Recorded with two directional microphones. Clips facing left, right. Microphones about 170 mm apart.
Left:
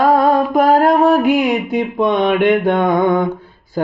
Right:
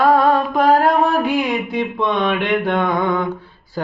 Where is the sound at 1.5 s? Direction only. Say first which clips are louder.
Left 3 dB; 45° left (ahead or behind).